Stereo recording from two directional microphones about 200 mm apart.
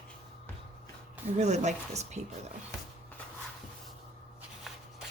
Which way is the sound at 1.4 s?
35° right (ahead or behind).